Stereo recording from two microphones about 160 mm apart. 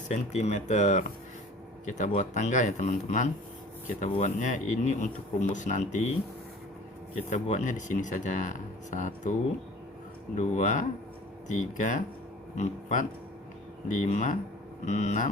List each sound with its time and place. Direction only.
0.1 s speech: 45° left (ahead or behind)
7.3 s speech: 50° left (ahead or behind)
10.3 s speech: 50° left (ahead or behind)